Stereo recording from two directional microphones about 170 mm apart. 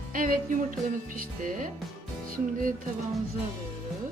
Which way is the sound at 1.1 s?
55° right (ahead or behind).